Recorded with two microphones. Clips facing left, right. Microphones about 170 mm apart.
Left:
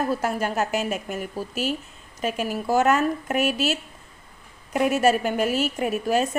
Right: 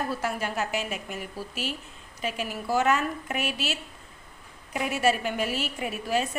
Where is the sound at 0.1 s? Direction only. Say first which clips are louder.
Left 5 dB; 45° left (ahead or behind).